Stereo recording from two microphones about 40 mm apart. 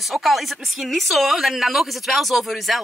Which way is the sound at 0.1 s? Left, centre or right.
Centre.